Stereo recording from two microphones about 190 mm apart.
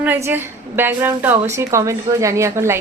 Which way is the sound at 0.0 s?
10° right (ahead or behind).